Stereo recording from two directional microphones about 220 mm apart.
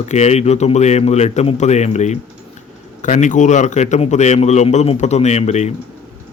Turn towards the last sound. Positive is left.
turn(degrees=30)  # may be behind; listen again after turning